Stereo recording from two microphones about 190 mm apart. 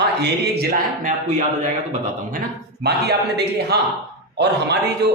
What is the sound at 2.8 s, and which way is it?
A man's voice, 60° right (ahead or behind).